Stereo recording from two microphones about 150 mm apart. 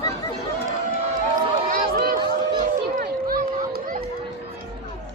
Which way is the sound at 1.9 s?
90° right.